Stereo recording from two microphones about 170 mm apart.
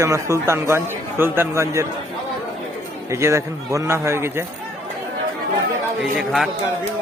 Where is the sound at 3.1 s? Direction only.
15° right (ahead or behind).